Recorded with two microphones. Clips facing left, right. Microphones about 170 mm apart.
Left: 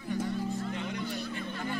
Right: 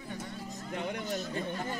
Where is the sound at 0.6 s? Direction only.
40° right (ahead or behind).